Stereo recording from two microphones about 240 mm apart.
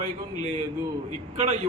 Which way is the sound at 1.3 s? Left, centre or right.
Right.